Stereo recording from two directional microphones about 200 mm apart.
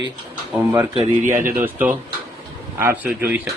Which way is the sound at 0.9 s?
40° right (ahead or behind).